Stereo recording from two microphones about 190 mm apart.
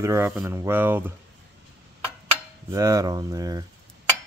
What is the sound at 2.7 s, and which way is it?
Speech, 15° right (ahead or behind).